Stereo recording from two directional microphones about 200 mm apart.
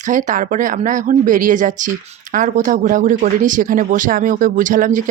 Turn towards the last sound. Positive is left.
turn(degrees=-40)  # may be behind; listen again after turning